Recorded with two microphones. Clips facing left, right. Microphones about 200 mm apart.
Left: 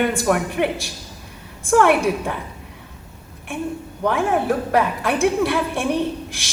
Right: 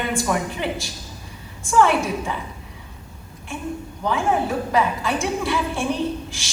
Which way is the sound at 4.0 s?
60° left (ahead or behind).